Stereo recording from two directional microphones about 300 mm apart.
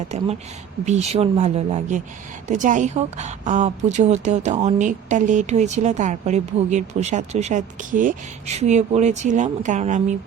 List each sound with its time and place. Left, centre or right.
0.9 s a woman's voice: right